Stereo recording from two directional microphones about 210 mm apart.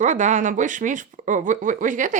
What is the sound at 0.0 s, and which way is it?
Speech, 35° right (ahead or behind).